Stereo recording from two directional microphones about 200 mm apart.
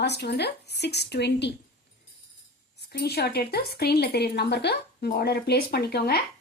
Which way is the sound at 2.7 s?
55° left (ahead or behind).